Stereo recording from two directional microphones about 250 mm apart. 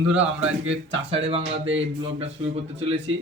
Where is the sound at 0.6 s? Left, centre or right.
Right.